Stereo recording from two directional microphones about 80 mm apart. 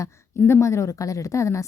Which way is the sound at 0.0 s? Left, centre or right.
Left.